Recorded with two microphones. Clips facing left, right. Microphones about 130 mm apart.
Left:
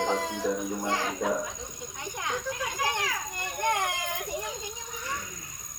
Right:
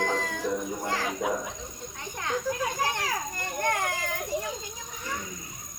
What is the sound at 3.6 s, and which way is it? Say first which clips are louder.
Baby cry: even; 15° left (ahead or behind).